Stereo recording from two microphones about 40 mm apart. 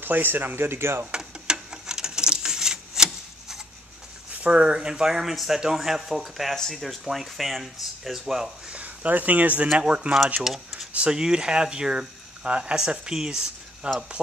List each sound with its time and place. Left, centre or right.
0.0 s speech: right
1.1 s a sound: centre
4.5 s speech: right
5.1 s speech: centre
6.5 s speech: centre
6.8 s speech: centre
8.6 s speech: right
9.8 s speech: right
10.4 s speech: centre
11.1 s speech: centre
13.8 s speech: right